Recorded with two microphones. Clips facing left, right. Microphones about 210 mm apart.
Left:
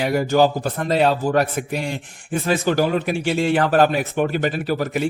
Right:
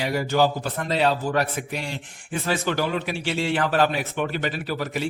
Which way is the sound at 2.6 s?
40° left (ahead or behind).